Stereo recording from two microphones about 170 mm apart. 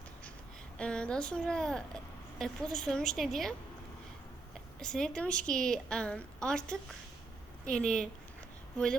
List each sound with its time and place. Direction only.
0.8 s a woman's voice: 5° left (ahead or behind)
4.8 s a woman's voice: 5° left (ahead or behind)